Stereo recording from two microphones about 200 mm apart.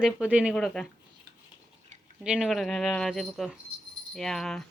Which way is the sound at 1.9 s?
35° right (ahead or behind).